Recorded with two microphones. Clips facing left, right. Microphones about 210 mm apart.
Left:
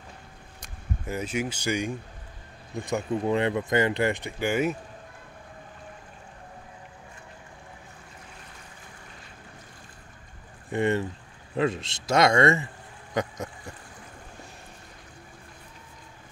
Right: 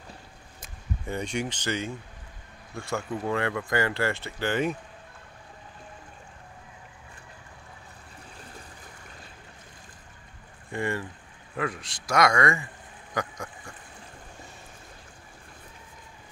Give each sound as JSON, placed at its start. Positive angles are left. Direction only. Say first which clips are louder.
{"t": 0.6, "sound": "speech", "louder": "left 1 dB", "side_deg": 5}
{"t": 10.7, "sound": "speech", "louder": "left 6 dB", "side_deg": 20}
{"t": 13.1, "sound": "a sound", "louder": "left 3 dB", "side_deg": 20}